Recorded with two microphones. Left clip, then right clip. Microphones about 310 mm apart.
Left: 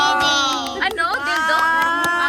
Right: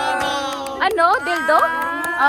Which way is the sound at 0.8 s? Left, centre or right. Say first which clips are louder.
Right 8 dB; centre.